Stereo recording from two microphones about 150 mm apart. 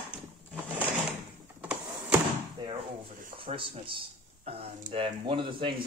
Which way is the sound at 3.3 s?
35° right (ahead or behind).